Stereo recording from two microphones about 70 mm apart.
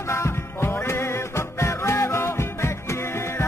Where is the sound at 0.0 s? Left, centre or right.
Left.